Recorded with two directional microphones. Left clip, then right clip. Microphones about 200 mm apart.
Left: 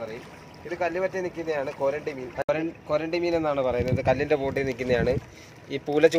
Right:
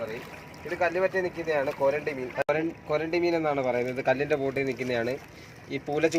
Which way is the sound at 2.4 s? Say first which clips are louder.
Left 2 dB; 35° left (ahead or behind).